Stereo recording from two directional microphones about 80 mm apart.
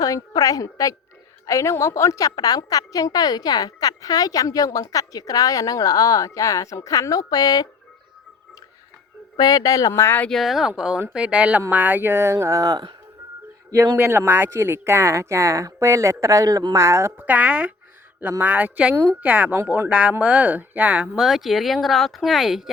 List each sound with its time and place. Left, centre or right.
0.0 s a woman's voice: left
9.4 s a woman's voice: left
10.0 s speech: left
10.2 s a man's voice: centre; by 13.9 s right
13.9 s speech: right
16.7 s speech: right
17.2 s speech: centre
18.2 s speech: right
21.2 s speech: centre